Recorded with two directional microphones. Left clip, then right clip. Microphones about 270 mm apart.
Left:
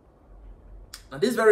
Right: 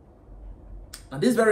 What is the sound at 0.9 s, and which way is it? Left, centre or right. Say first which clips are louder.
Speech: right 1 dB; centre.